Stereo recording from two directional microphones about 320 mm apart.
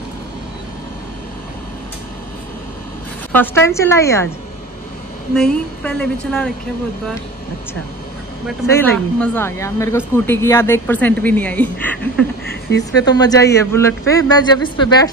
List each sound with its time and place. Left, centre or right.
3.3 s a man's voice: centre
5.3 s speech: centre
8.5 s speech: centre
12.4 s a sound: left
13.0 s a man's voice: centre